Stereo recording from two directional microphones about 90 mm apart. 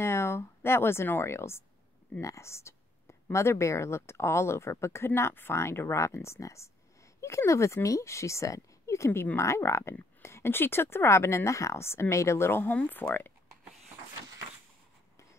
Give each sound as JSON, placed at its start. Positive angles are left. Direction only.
{"t": 0.0, "sound": "a woman's voice", "side_deg": 30}